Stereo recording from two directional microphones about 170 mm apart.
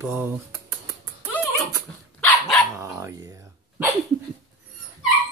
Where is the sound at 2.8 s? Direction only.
15° right (ahead or behind).